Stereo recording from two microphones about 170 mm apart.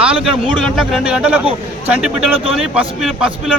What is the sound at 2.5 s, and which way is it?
A man's voice, centre (ahead or behind).